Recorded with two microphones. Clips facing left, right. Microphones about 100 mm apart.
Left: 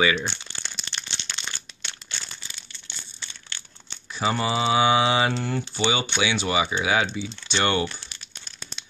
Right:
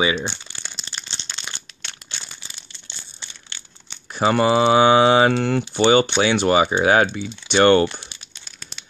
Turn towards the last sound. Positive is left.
turn(degrees=-55)  # may be behind; listen again after turning